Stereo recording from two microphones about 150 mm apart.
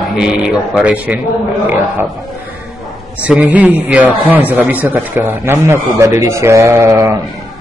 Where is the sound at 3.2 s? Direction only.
10° right (ahead or behind).